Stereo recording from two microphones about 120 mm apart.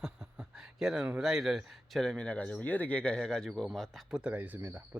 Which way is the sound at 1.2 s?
5° right (ahead or behind).